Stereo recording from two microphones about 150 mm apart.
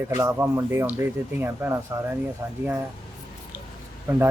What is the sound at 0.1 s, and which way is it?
Speech, 20° right (ahead or behind).